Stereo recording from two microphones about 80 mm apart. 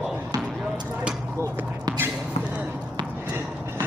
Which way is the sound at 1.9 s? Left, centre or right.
Right.